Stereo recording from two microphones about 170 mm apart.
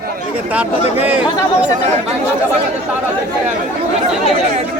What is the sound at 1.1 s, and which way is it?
Speech, 10° right (ahead or behind).